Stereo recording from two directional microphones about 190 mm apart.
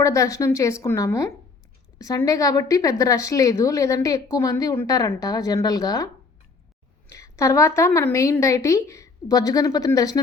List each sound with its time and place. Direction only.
0.0 s a woman's voice: 15° left (ahead or behind)
7.1 s a woman's voice: 15° left (ahead or behind)